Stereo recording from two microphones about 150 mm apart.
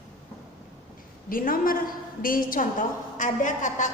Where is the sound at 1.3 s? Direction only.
70° left (ahead or behind).